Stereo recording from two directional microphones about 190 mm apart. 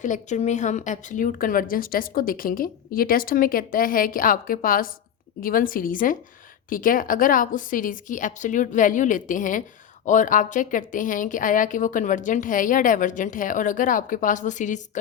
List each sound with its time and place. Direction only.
0.0 s a woman's voice: 40° left (ahead or behind)